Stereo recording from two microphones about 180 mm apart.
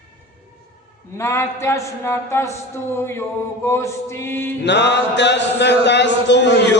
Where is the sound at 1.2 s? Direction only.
15° left (ahead or behind).